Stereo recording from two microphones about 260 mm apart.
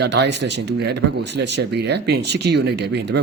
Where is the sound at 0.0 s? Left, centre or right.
Right.